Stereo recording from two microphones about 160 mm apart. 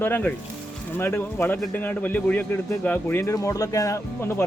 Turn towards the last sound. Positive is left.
turn(degrees=20)  # may be behind; listen again after turning